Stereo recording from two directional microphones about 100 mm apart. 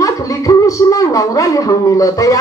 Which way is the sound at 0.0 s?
35° left (ahead or behind).